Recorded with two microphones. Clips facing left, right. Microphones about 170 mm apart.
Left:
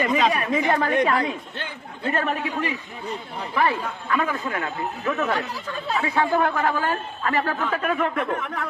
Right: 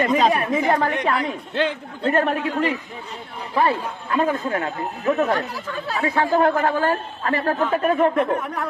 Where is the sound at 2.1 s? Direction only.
45° right (ahead or behind).